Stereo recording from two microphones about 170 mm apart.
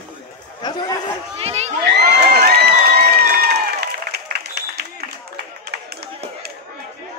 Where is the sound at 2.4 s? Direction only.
70° right (ahead or behind).